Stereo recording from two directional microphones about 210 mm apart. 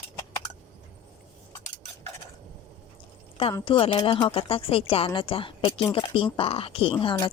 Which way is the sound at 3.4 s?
25° left (ahead or behind).